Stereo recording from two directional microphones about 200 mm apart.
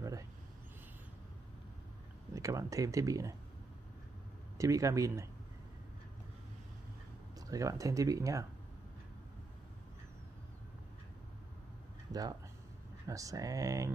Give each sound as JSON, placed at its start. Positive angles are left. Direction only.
{"t": 2.3, "sound": "speech", "side_deg": -15}
{"t": 4.6, "sound": "speech", "side_deg": -15}
{"t": 7.3, "sound": "speech", "side_deg": -15}
{"t": 12.1, "sound": "speech", "side_deg": -20}